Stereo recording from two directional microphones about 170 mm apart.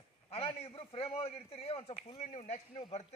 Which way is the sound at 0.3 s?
35° left (ahead or behind).